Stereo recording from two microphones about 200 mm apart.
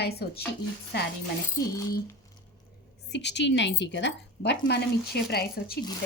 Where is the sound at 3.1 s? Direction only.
60° left (ahead or behind).